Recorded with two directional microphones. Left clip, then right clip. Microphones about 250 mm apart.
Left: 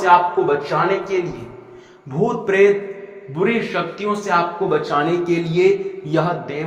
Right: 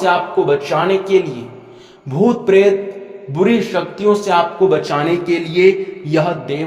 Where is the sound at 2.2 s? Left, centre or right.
Right.